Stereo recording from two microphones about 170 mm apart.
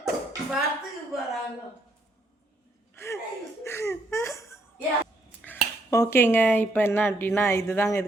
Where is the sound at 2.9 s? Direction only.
15° left (ahead or behind).